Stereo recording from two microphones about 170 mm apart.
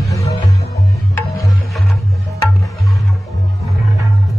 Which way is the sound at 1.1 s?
20° left (ahead or behind).